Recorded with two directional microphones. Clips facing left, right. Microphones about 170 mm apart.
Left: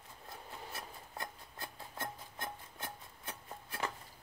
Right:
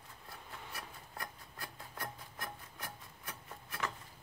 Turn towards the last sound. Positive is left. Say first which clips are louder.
# left 1 dB
turn(degrees=30)  # may be behind; listen again after turning